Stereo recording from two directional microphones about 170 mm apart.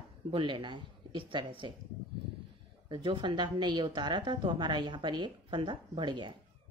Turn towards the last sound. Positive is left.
turn(degrees=-30)  # may be behind; listen again after turning